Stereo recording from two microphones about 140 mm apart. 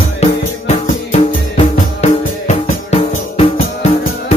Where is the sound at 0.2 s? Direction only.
50° left (ahead or behind).